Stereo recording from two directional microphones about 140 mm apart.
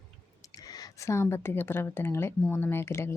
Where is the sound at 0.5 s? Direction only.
25° left (ahead or behind).